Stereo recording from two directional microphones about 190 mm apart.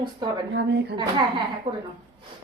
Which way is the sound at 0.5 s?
70° right (ahead or behind).